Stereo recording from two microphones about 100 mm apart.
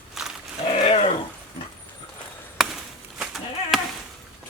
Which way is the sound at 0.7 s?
85° left.